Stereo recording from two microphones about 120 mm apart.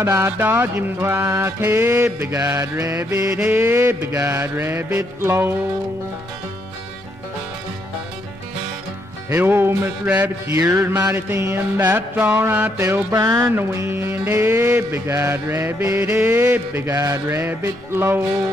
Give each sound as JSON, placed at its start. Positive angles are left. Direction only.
{"t": 0.0, "sound": "music", "side_deg": -25}
{"t": 9.3, "sound": "music", "side_deg": -20}
{"t": 10.5, "sound": "music", "side_deg": -25}
{"t": 13.1, "sound": "speech", "side_deg": -35}
{"t": 13.6, "sound": "music", "side_deg": -20}